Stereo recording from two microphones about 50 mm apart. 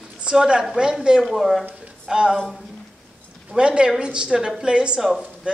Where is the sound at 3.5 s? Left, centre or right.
Centre.